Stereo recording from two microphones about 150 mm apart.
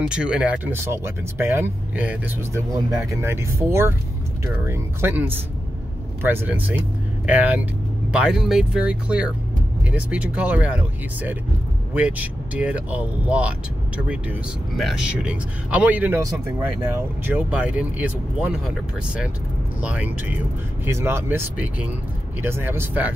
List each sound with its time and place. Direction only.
0.1 s speech: 5° right (ahead or behind)
2.7 s speech: 25° right (ahead or behind)
14.8 s speech: 5° right (ahead or behind)
17.3 s speech: 10° right (ahead or behind)